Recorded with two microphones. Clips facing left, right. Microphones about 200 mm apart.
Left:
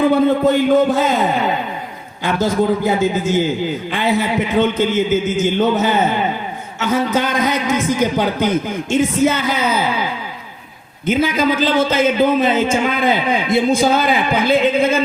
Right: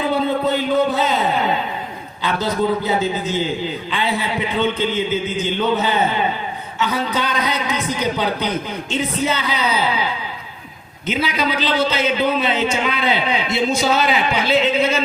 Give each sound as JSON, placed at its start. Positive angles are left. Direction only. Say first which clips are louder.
{"t": 0.0, "sound": "a man's voice", "louder": "left 6 dB", "side_deg": 50}